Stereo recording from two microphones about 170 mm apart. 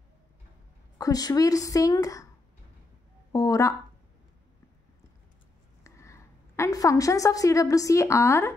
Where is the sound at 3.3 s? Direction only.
20° left (ahead or behind).